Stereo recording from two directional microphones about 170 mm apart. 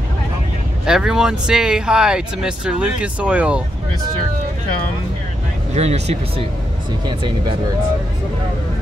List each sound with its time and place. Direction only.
0.8 s speech: 5° right (ahead or behind)
5.8 s speech: 40° right (ahead or behind)
7.1 s speech: 30° right (ahead or behind)